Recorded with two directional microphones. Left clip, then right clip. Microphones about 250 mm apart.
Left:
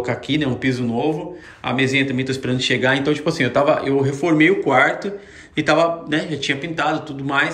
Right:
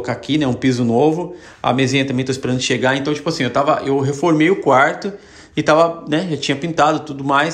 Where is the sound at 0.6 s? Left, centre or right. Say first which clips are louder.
Right 6 dB; centre.